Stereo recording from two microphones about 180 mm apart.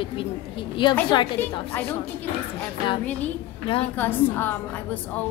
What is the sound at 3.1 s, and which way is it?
A woman's voice, 10° left (ahead or behind).